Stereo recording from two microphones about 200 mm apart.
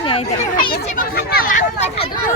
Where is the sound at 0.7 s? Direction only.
50° left (ahead or behind); by 2.1 s 30° left (ahead or behind).